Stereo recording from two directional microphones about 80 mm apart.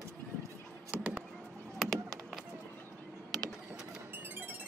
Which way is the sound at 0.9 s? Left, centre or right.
Centre.